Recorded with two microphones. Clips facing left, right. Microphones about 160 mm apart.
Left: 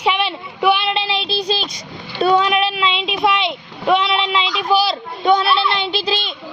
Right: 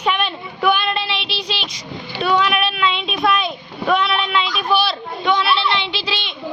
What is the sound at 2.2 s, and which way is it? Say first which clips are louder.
Speech: left 3 dB; 35° left (ahead or behind).